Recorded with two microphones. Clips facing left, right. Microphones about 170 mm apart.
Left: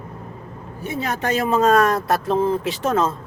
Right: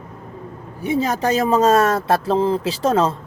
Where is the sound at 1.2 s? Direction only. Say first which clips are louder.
Right 1 dB; 35° right (ahead or behind).